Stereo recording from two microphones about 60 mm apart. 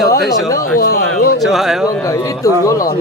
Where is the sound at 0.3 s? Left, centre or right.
Left.